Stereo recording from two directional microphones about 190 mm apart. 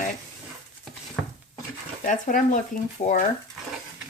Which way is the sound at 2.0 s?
45° left (ahead or behind).